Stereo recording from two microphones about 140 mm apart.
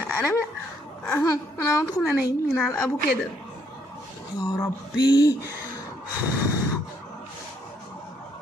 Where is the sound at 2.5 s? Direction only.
Centre (ahead or behind).